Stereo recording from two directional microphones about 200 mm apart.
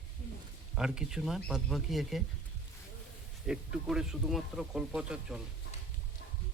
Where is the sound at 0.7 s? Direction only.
5° right (ahead or behind).